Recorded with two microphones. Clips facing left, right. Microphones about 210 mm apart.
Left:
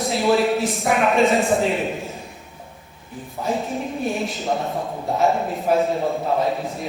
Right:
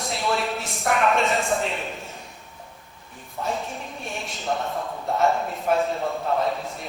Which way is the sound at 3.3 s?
Centre (ahead or behind).